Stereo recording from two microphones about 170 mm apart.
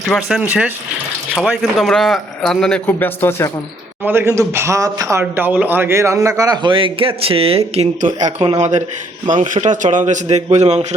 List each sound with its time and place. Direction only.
0.1 s a man's voice: centre (ahead or behind); by 3.5 s 15° left (ahead or behind)
4.0 s a man's voice: 15° right (ahead or behind); by 8.3 s 45° right (ahead or behind)
8.4 s a man's voice: 25° right (ahead or behind)
9.2 s a man's voice: 50° right (ahead or behind)